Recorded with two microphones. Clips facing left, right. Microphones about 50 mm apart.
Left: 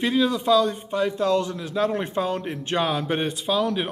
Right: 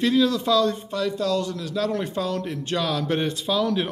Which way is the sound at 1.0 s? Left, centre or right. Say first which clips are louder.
Left 4 dB; left.